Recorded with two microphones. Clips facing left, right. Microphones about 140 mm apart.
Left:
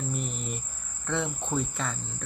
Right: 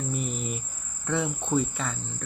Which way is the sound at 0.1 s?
Centre (ahead or behind).